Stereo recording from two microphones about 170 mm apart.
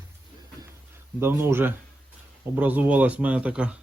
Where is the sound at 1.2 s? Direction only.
15° right (ahead or behind).